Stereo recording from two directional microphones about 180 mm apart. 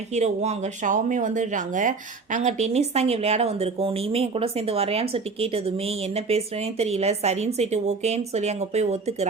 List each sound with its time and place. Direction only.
0.1 s speech: 40° right (ahead or behind)